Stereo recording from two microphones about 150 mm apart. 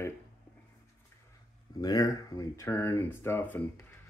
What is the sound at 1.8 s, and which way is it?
Speech, 25° left (ahead or behind).